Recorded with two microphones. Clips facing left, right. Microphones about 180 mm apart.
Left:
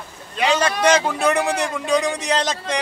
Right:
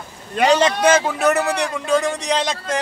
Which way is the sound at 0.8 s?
5° right (ahead or behind).